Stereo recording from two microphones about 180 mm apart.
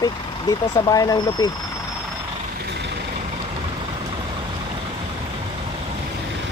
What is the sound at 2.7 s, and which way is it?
Vehicle, 70° right (ahead or behind).